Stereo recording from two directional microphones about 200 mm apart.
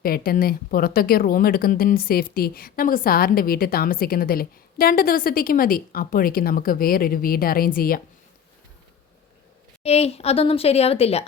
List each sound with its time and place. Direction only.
0.0 s a woman's voice: 50° left (ahead or behind)
9.8 s speech: 30° left (ahead or behind)